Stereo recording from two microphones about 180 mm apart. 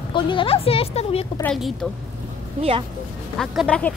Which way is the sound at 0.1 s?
30° left (ahead or behind).